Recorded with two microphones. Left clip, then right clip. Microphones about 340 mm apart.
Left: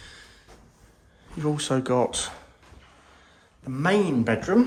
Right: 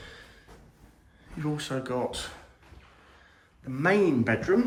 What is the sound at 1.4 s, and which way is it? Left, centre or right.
Speech, centre.